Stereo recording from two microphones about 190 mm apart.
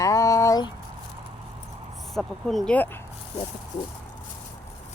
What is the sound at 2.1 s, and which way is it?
Speech, centre (ahead or behind).